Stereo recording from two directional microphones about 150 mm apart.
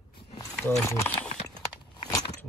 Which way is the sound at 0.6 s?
15° left (ahead or behind).